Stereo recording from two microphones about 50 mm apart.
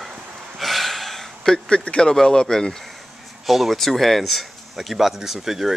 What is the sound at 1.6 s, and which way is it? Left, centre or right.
Speech, centre.